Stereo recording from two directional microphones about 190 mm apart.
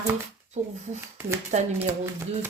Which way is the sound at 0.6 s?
40° right (ahead or behind).